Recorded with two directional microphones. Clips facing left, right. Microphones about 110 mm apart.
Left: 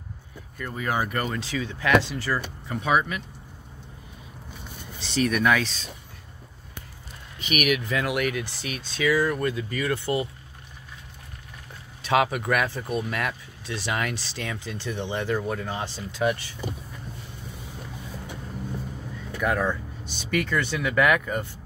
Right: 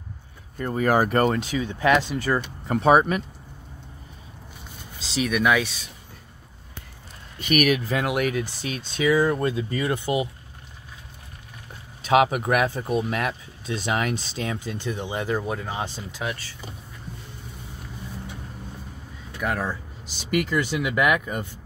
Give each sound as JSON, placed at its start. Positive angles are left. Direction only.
{"t": 0.6, "sound": "speech", "side_deg": -40}
{"t": 1.4, "sound": "speech", "side_deg": -15}
{"t": 2.7, "sound": "speech", "side_deg": -35}
{"t": 5.1, "sound": "speech", "side_deg": -5}
{"t": 7.3, "sound": "speech", "side_deg": -45}
{"t": 8.0, "sound": "speech", "side_deg": -20}
{"t": 12.1, "sound": "speech", "side_deg": -20}
{"t": 16.2, "sound": "speech", "side_deg": -5}
{"t": 19.4, "sound": "speech", "side_deg": 0}
{"t": 20.2, "sound": "speech", "side_deg": -25}